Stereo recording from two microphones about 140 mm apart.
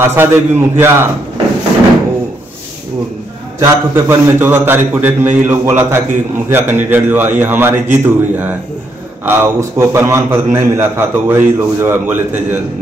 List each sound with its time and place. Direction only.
0.0 s a man's voice: 15° right (ahead or behind)
3.5 s a man's voice: 20° right (ahead or behind)